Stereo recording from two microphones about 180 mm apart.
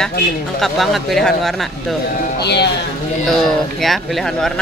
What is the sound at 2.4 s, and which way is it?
Speech, 70° left (ahead or behind).